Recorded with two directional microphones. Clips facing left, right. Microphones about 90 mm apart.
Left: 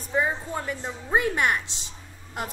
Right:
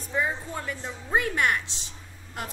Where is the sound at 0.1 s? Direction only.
20° left (ahead or behind).